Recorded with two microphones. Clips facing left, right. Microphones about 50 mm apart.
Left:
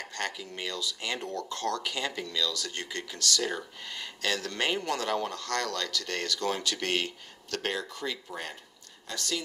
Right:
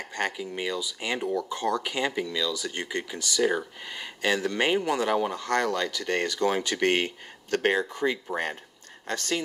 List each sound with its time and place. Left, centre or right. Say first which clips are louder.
0.1 s speech: right 7 dB; centre; by 9.4 s right